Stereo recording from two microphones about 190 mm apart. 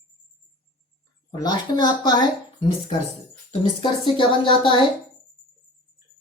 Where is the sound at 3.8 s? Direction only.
25° left (ahead or behind).